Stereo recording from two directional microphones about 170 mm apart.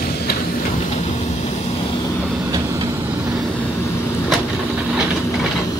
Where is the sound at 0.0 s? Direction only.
65° left (ahead or behind).